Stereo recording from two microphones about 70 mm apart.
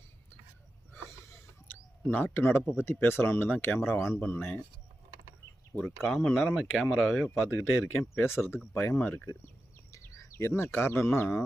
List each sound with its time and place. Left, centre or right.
1.6 s bird: left
2.7 s speech: left
5.8 s speech: centre
7.4 s speech: left
9.2 s speech: left